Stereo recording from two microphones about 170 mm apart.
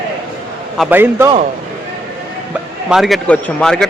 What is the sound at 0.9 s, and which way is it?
Speech, 10° right (ahead or behind).